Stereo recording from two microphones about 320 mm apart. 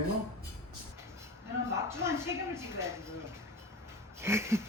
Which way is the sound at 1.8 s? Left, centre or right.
Centre.